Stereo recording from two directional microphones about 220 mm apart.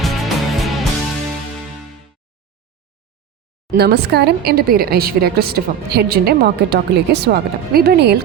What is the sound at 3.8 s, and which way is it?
A woman's voice, 45° right (ahead or behind).